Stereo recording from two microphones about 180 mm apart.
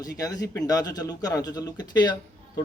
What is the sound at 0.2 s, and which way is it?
A man's voice, 20° left (ahead or behind).